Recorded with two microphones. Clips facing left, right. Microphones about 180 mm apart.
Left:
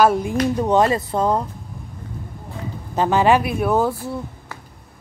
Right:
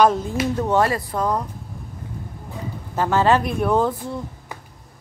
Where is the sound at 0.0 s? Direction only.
10° left (ahead or behind).